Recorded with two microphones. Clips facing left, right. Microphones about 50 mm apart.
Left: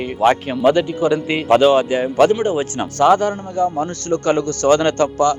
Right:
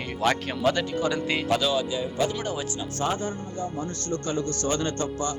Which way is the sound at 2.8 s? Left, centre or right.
Left.